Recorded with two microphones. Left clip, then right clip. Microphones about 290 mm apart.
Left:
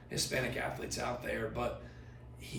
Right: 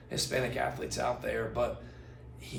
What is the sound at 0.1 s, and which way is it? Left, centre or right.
Speech, centre.